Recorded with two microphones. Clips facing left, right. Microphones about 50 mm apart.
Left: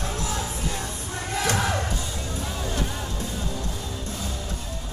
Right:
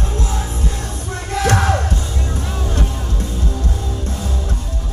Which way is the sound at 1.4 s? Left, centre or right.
Right.